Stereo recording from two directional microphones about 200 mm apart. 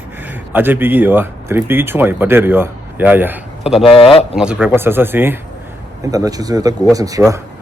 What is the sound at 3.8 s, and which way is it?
Speech, 30° left (ahead or behind).